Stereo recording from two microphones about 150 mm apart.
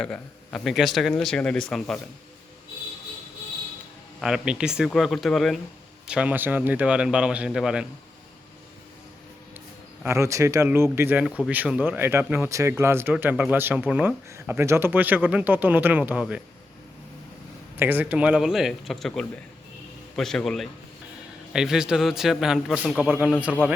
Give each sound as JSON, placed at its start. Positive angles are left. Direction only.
{"t": 0.0, "sound": "speech", "side_deg": 5}
{"t": 4.2, "sound": "speech", "side_deg": -5}
{"t": 10.0, "sound": "speech", "side_deg": -20}
{"t": 17.7, "sound": "speech", "side_deg": -10}